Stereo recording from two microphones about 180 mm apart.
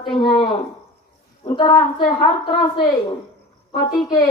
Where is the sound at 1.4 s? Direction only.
25° left (ahead or behind).